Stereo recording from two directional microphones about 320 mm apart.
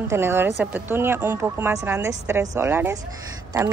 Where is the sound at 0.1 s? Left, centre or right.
Centre.